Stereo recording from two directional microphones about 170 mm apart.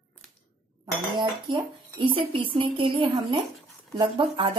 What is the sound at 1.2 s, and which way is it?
Speech, 25° right (ahead or behind).